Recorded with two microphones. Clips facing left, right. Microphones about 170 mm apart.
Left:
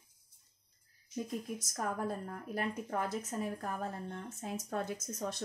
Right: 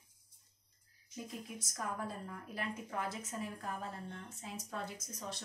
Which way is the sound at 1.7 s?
45° left (ahead or behind).